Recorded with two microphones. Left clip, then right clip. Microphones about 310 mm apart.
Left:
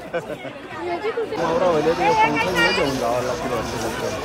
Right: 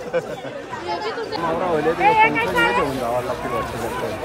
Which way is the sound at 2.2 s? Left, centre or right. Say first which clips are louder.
Right 1 dB; right.